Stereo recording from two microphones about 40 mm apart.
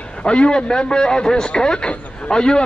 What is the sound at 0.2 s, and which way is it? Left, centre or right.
A man's voice, left.